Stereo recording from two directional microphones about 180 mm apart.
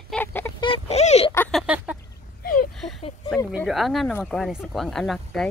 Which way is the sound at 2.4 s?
50° left (ahead or behind).